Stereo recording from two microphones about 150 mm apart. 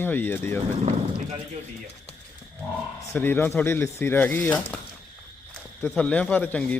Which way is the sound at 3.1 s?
15° left (ahead or behind).